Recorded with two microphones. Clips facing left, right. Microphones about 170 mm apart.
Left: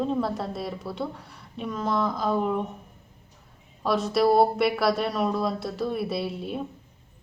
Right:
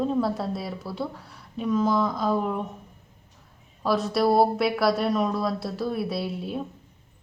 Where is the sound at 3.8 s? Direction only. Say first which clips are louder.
Even; centre (ahead or behind).